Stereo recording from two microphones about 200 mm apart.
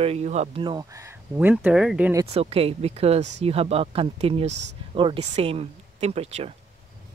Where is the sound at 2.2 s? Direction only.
30° right (ahead or behind).